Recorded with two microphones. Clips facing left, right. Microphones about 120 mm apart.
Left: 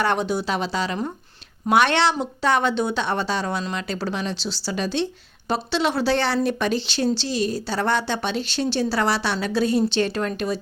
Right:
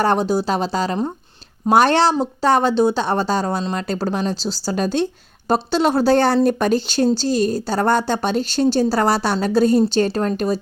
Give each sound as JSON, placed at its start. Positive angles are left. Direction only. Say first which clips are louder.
{"t": 0.0, "sound": "a woman's voice", "louder": "right 5 dB", "side_deg": -40}